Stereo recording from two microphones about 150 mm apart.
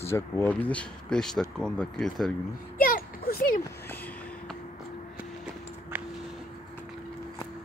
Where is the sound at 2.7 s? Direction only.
70° left (ahead or behind).